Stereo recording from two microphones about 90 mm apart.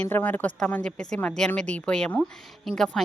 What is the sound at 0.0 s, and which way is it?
Speech, 20° left (ahead or behind).